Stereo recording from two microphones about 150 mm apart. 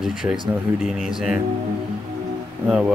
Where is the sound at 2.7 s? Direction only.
5° right (ahead or behind).